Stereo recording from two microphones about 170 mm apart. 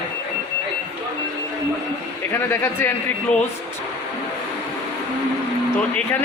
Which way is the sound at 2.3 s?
15° left (ahead or behind).